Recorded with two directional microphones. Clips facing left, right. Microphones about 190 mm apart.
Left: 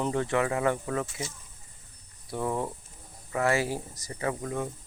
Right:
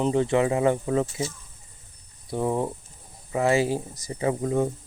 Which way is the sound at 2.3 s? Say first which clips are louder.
Right 5 dB; 25° right (ahead or behind).